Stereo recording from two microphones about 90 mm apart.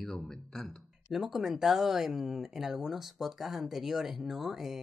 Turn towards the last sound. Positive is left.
turn(degrees=-5)  # may be behind; listen again after turning